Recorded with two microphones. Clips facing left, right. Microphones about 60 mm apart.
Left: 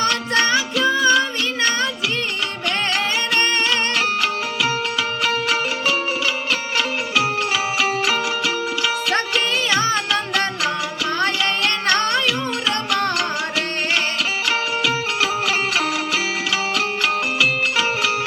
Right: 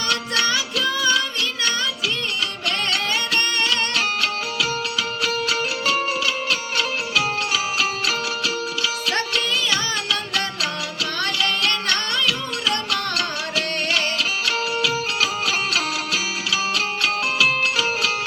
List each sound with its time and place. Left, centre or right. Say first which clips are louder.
0.0 s music: left 4 dB; left
3.7 s music: left 2 dB; left
7.2 s music: left 3 dB; left
14.4 s music: left 3 dB; left